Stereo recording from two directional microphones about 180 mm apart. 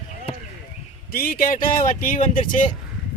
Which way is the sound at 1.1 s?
55° left (ahead or behind).